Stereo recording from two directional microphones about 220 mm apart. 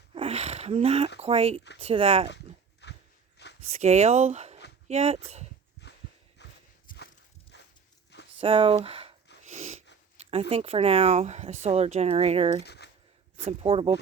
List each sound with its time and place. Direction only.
0.1 s speech: 25° right (ahead or behind)
2.8 s a sound: 50° left (ahead or behind)
3.7 s speech: 30° right (ahead or behind)
5.8 s a sound: 50° left (ahead or behind)
6.4 s walk: 50° left (ahead or behind)
6.9 s walk: 40° left (ahead or behind)
7.5 s walk: 50° left (ahead or behind)
8.4 s speech: 25° right (ahead or behind)
9.4 s a sound: 30° right (ahead or behind)
10.5 s speech: 25° right (ahead or behind)
12.6 s a sound: 50° left (ahead or behind)
13.3 s speech: 25° right (ahead or behind)